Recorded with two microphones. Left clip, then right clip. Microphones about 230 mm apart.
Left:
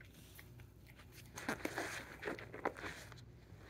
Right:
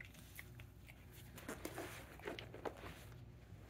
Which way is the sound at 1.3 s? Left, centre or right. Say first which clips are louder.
Left 8 dB; left.